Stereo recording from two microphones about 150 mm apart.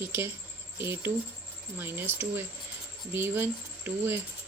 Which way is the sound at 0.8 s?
15° right (ahead or behind).